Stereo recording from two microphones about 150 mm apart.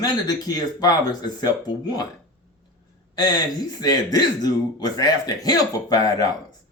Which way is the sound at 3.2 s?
25° left (ahead or behind).